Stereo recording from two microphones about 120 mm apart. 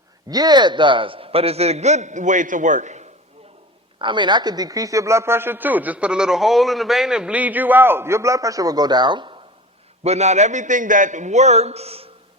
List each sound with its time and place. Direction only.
0.3 s a man's voice: 35° right (ahead or behind); by 3.1 s 80° right
3.9 s a man's voice: 40° right (ahead or behind)
10.0 s a man's voice: 65° right (ahead or behind)